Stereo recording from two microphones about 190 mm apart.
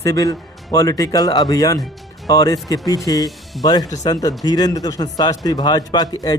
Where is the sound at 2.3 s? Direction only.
20° left (ahead or behind).